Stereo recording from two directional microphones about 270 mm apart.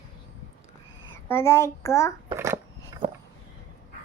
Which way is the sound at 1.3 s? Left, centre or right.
Centre.